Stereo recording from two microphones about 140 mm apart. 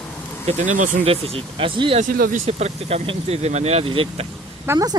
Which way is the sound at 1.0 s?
45° right (ahead or behind).